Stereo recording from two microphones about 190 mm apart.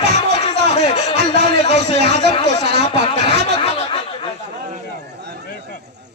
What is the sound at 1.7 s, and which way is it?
Speech, 60° right (ahead or behind).